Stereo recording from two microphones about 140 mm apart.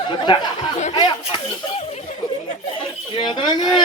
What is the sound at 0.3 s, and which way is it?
Speech, 35° left (ahead or behind).